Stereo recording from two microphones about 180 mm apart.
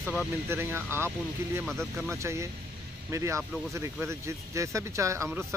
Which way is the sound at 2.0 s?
15° right (ahead or behind).